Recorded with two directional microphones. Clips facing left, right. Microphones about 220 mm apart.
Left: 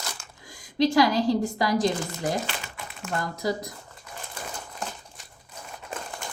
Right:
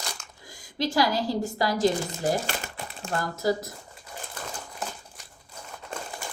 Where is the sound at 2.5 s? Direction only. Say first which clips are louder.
Right 3 dB; 35° right (ahead or behind).